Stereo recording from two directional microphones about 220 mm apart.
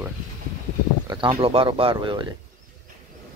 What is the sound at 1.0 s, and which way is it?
Speech, 20° right (ahead or behind).